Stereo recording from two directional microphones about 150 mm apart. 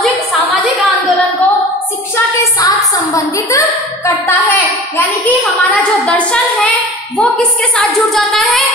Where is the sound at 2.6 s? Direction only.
20° left (ahead or behind).